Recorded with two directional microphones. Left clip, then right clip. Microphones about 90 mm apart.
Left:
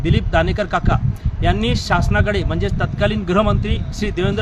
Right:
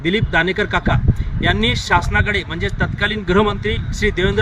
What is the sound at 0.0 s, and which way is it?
Speech, 35° left (ahead or behind).